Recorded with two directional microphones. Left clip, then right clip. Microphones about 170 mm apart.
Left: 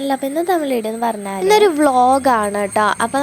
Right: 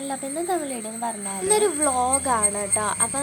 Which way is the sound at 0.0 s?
40° left (ahead or behind).